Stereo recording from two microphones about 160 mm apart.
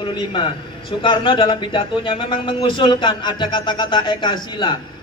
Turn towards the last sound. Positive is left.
turn(degrees=30)  # may be behind; listen again after turning